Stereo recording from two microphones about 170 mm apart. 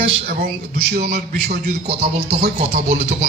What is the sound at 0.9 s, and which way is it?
Speech, 70° right (ahead or behind).